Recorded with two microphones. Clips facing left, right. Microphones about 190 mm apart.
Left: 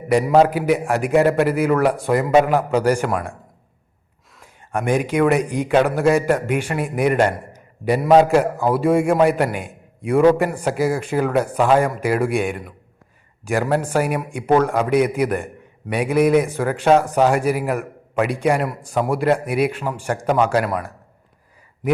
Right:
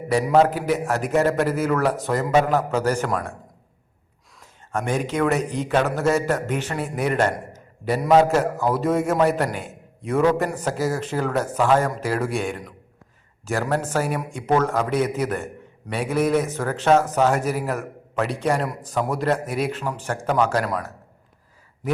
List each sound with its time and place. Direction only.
0.3 s a man's voice: 10° left (ahead or behind)
4.7 s a man's voice: 15° left (ahead or behind)